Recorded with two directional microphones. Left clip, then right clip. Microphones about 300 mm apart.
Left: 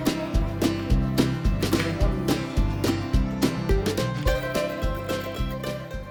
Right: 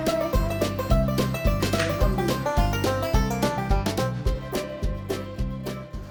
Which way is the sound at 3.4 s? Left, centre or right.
Centre.